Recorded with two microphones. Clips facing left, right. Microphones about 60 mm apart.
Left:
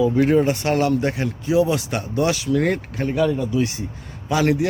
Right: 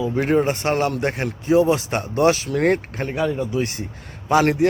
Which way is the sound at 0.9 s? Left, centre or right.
Right.